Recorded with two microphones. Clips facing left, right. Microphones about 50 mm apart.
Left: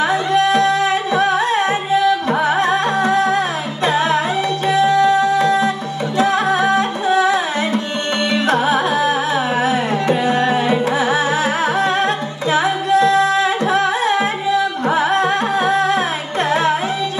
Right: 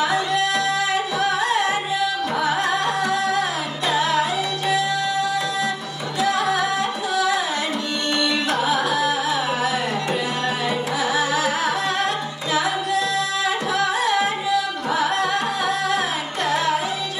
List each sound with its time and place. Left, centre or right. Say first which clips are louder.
0.0 s music: left 5 dB; left
8.5 s music: left 5 dB; left
9.6 s carnatic music: left 6 dB; left
12.5 s music: left 6 dB; left